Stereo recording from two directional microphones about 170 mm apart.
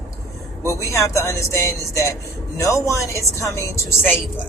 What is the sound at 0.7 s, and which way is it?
Speech, 20° left (ahead or behind).